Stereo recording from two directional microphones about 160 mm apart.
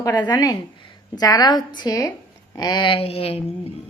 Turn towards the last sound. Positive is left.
turn(degrees=35)  # may be behind; listen again after turning